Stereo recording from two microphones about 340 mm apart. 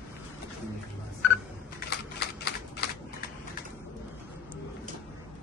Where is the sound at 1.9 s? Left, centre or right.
Left.